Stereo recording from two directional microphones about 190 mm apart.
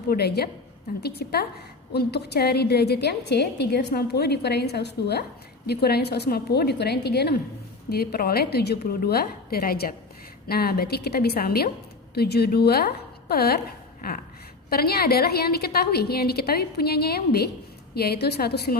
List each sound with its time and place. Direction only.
0.1 s a woman's voice: 55° left (ahead or behind)